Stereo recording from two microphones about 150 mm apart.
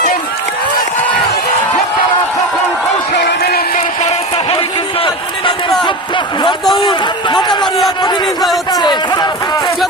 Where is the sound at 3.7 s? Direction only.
45° left (ahead or behind).